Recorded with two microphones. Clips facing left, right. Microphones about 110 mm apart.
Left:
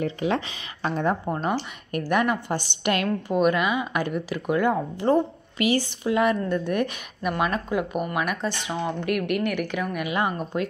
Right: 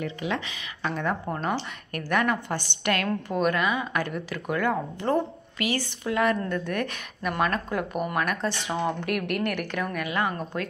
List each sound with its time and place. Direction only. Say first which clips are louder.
0.0 s a woman's voice: left 5 dB; 35° left (ahead or behind)
1.2 s speech: left 2 dB; 15° left (ahead or behind)